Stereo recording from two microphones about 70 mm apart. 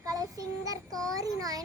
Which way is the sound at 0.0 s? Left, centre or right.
Right.